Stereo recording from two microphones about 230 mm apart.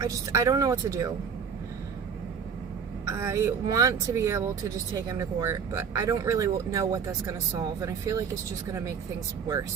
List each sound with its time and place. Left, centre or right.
0.0 s speech: centre
3.1 s speech: centre